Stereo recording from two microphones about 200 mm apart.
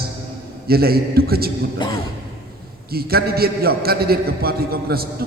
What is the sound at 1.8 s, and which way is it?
Speech, 20° left (ahead or behind).